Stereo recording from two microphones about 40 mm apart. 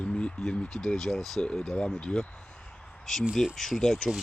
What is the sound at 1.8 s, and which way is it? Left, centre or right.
Speech, centre.